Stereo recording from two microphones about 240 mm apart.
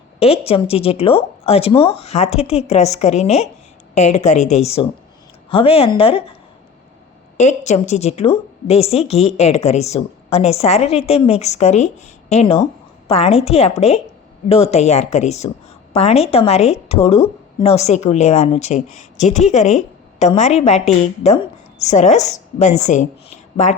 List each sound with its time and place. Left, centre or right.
0.2 s a woman's voice: left
7.3 s a woman's voice: left